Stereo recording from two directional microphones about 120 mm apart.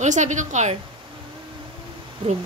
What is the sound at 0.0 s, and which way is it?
Speech, 90° right.